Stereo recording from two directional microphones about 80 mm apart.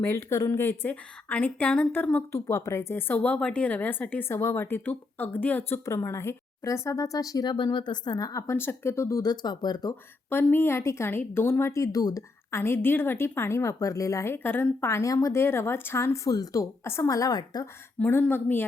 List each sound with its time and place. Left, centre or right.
0.0 s a woman's voice: left
2.1 s a woman's voice: left
2.9 s a woman's voice: left
4.3 s a woman's voice: left
5.8 s speech: left
9.2 s speech: left
10.2 s a woman's voice: left
12.5 s a woman's voice: left
14.3 s a woman's voice: left
14.8 s a woman's voice: left
15.4 s a woman's voice: left
16.8 s speech: left
18.0 s a woman's voice: left